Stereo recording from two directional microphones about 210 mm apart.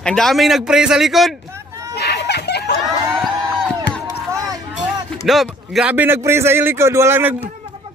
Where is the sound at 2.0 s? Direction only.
50° left (ahead or behind).